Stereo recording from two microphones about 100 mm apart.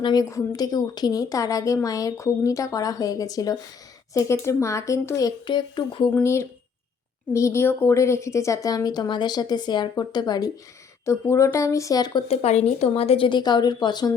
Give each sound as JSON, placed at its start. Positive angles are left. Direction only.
{"t": 0.0, "sound": "a woman's voice", "side_deg": 45}
{"t": 5.5, "sound": "speech", "side_deg": 50}
{"t": 6.2, "sound": "a woman's voice", "side_deg": 25}
{"t": 11.0, "sound": "a woman's voice", "side_deg": 30}
{"t": 12.3, "sound": "a woman's voice", "side_deg": 90}